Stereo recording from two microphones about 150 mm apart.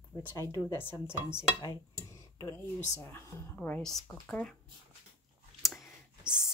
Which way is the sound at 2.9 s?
20° left (ahead or behind).